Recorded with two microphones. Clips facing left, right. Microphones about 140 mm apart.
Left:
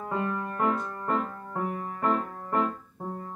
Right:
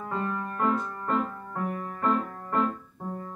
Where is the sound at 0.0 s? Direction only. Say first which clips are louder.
Left 1 dB; 15° left (ahead or behind).